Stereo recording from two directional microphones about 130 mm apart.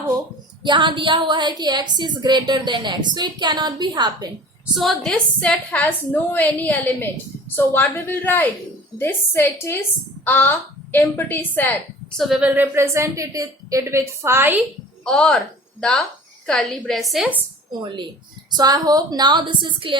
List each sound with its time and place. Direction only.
0.6 s a woman's voice: 35° right (ahead or behind)
4.6 s a woman's voice: centre (ahead or behind)
12.2 s a woman's voice: 5° right (ahead or behind)
15.0 s a woman's voice: 5° left (ahead or behind)
17.7 s a woman's voice: 35° right (ahead or behind)